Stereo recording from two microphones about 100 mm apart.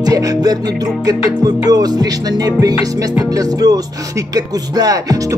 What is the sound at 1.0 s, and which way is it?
Speech, 40° right (ahead or behind).